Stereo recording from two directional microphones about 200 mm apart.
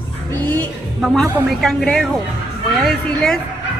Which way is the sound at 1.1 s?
Centre (ahead or behind).